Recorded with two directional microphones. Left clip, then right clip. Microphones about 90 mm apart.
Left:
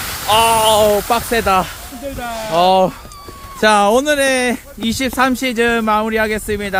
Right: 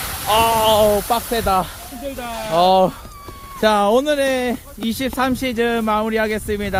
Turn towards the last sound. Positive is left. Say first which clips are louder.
# left 3 dB
turn(degrees=0)  # may be behind; listen again after turning